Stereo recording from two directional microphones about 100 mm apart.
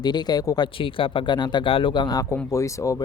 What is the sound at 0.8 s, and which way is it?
Speech, 60° left (ahead or behind).